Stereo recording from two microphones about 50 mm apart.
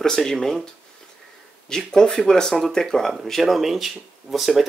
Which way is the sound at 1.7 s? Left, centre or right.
Centre.